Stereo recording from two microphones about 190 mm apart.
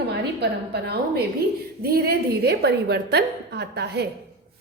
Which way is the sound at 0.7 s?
55° right (ahead or behind).